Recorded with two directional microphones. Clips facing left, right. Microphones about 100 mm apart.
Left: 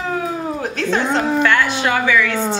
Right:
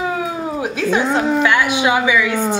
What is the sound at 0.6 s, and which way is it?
A woman's voice, 10° right (ahead or behind).